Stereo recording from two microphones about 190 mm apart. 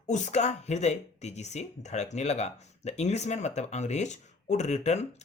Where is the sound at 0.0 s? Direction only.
40° left (ahead or behind).